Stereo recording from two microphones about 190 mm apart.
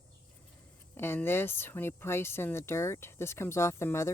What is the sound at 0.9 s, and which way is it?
Speech, 10° left (ahead or behind).